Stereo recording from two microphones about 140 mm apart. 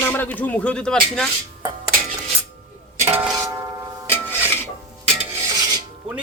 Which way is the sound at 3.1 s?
15° right (ahead or behind).